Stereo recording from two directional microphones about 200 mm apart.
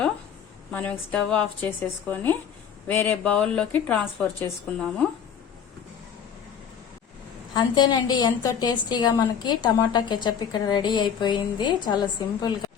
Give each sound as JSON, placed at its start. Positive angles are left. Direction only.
{"t": 0.7, "sound": "a woman's voice", "side_deg": 5}
{"t": 7.5, "sound": "a woman's voice", "side_deg": 20}